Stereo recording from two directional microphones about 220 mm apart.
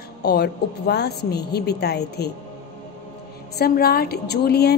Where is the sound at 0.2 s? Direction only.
45° left (ahead or behind).